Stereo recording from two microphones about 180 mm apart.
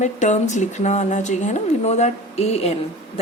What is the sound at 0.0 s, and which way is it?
Speech, 40° left (ahead or behind).